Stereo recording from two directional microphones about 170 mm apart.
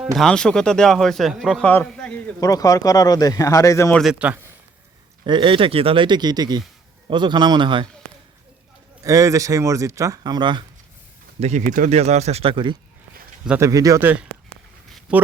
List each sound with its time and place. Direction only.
0.2 s a man's voice: 5° left (ahead or behind)
2.4 s speech: 20° left (ahead or behind)
3.9 s a man's voice: centre (ahead or behind)
5.2 s speech: 30° right (ahead or behind)
9.0 s speech: 20° right (ahead or behind)
11.3 s speech: 45° right (ahead or behind)
13.6 s speech: 20° right (ahead or behind)